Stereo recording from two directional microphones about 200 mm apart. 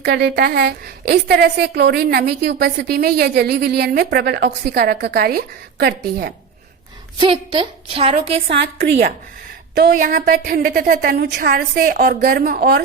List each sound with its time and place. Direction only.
0.0 s a woman's voice: 55° right (ahead or behind)
7.2 s a woman's voice: 25° right (ahead or behind)
8.6 s a woman's voice: 55° right (ahead or behind)